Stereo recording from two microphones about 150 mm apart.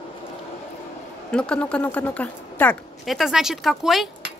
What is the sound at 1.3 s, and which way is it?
Speech, 5° left (ahead or behind).